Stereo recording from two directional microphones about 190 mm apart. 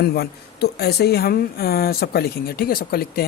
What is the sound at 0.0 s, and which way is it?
A woman's voice, 55° left (ahead or behind).